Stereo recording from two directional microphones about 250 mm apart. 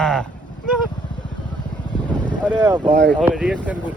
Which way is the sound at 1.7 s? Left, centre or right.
Centre.